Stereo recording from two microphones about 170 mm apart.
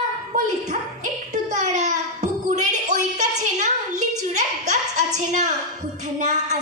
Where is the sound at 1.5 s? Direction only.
45° right (ahead or behind).